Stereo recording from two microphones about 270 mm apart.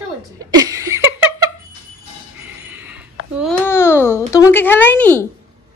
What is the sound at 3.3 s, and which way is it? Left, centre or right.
A child's voice, centre.